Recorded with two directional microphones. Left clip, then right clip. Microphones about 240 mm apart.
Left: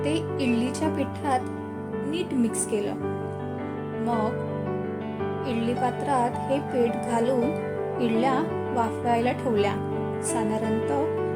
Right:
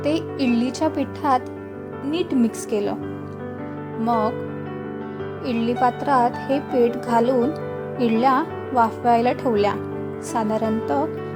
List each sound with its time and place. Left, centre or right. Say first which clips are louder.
0.0 s speech: right 4 dB; centre
5.5 s speech: right 8 dB; centre